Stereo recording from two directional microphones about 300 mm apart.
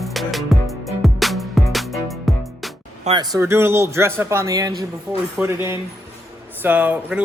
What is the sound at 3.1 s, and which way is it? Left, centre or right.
A man's voice, centre.